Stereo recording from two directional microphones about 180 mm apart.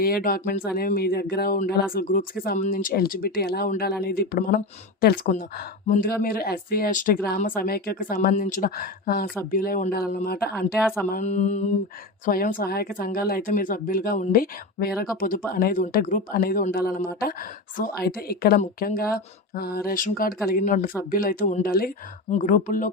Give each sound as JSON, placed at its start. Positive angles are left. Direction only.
{"t": 0.0, "sound": "speech", "side_deg": 55}
{"t": 11.1, "sound": "mantra", "side_deg": 40}
{"t": 12.2, "sound": "speech", "side_deg": 50}
{"t": 22.3, "sound": "speech", "side_deg": 45}